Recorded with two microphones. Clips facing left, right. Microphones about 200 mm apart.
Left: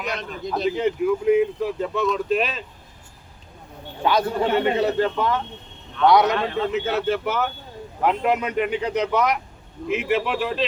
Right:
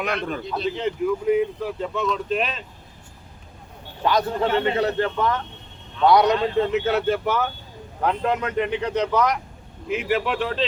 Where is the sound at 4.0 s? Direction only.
10° left (ahead or behind).